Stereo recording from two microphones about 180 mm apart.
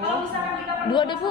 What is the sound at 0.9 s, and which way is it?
Speech, 25° left (ahead or behind).